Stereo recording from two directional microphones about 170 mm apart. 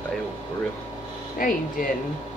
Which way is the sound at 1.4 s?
55° left (ahead or behind).